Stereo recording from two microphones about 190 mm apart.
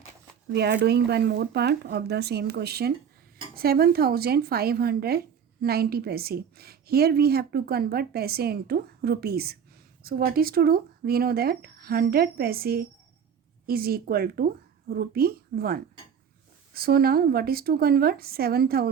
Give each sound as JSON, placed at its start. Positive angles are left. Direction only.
{"t": 0.5, "sound": "a woman's voice", "side_deg": -60}